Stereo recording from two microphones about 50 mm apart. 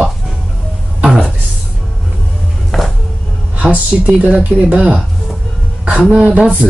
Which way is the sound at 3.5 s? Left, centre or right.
Right.